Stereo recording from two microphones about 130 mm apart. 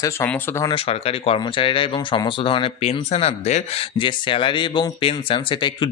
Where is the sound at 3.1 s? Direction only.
55° left (ahead or behind).